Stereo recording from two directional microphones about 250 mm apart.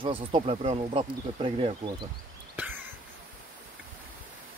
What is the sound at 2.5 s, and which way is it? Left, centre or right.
Cough, centre.